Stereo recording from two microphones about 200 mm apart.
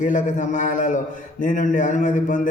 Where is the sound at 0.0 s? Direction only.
40° left (ahead or behind).